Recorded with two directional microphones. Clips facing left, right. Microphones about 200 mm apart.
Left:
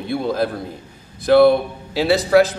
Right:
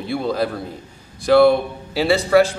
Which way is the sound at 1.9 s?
Centre (ahead or behind).